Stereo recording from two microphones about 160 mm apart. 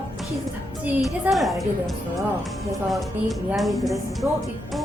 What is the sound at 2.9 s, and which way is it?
Speech, centre (ahead or behind).